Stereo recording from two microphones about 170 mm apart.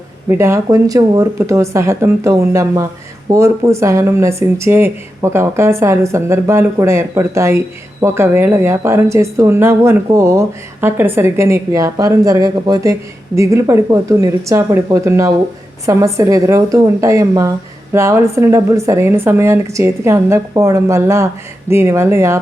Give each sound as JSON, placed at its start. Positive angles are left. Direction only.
{"t": 0.3, "sound": "a woman's voice", "side_deg": -15}